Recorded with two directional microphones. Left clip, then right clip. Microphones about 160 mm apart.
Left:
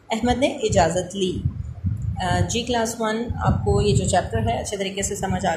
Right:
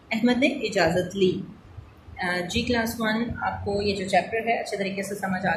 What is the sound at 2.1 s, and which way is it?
A woman's voice, 30° left (ahead or behind).